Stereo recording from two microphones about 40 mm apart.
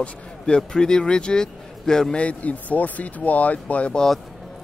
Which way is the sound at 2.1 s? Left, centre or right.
Left.